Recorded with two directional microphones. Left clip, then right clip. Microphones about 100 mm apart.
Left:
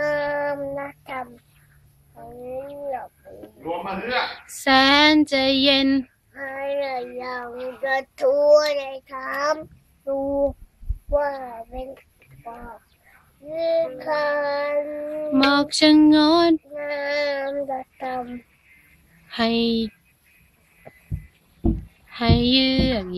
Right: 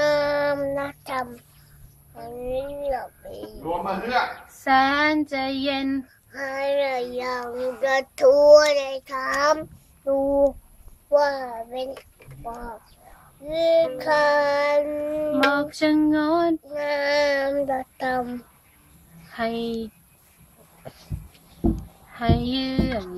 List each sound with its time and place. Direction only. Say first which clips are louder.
0.0 s child singing: right 2 dB; 25° right (ahead or behind)
3.0 s a man's voice: right 3 dB; 25° right (ahead or behind)
4.6 s child singing: left 4 dB; 20° left (ahead or behind)
6.3 s child singing: right 3 dB; 25° right (ahead or behind)
12.4 s speech: right 3 dB; 15° right (ahead or behind)
13.5 s child singing: right 3 dB; 30° right (ahead or behind)
15.5 s child singing: left 5 dB; 25° left (ahead or behind)
16.7 s child singing: right 3 dB; 30° right (ahead or behind)
19.3 s child singing: left 5 dB; 20° left (ahead or behind)
22.1 s child singing: left 5 dB; 20° left (ahead or behind)